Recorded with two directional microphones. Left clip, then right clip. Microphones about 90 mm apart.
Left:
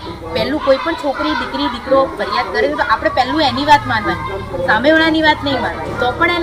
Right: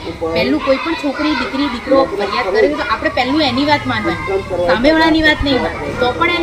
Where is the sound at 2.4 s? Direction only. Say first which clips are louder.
Right 2 dB; 15° right (ahead or behind).